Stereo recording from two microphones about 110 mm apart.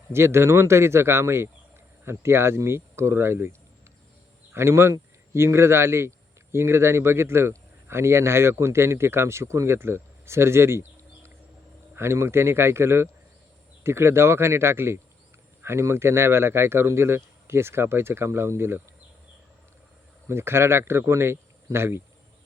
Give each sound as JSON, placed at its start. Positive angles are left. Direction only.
{"t": 0.1, "sound": "speech", "side_deg": -25}
{"t": 4.5, "sound": "speech", "side_deg": -25}
{"t": 20.2, "sound": "speech", "side_deg": -25}